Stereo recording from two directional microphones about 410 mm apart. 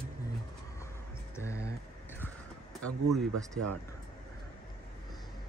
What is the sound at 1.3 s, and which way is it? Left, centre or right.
Music, centre.